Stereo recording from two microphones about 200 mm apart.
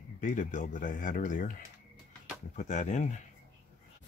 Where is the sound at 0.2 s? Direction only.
40° left (ahead or behind).